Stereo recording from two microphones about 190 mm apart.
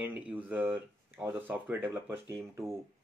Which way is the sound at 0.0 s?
10° right (ahead or behind).